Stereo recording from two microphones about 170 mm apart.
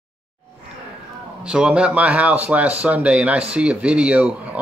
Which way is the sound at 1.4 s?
5° right (ahead or behind).